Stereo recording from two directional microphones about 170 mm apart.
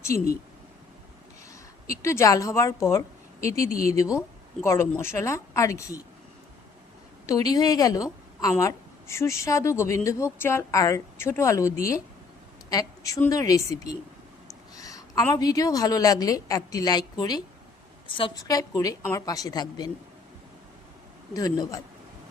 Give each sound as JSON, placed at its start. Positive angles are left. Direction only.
{"t": 0.0, "sound": "a woman's voice", "side_deg": 15}
{"t": 1.9, "sound": "a woman's voice", "side_deg": 15}
{"t": 7.3, "sound": "a woman's voice", "side_deg": 20}
{"t": 13.2, "sound": "a woman's voice", "side_deg": 20}
{"t": 21.3, "sound": "a woman's voice", "side_deg": 20}